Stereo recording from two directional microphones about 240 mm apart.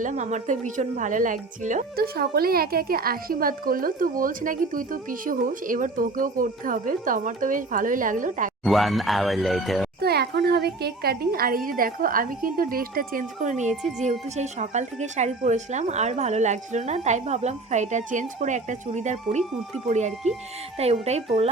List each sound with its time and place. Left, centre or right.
0.0 s speech: right
8.6 s speech: centre
10.0 s speech: right